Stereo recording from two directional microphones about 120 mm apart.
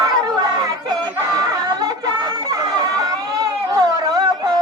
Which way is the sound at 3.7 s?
35° right (ahead or behind).